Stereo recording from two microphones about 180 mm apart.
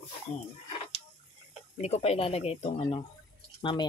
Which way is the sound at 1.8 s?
35° left (ahead or behind).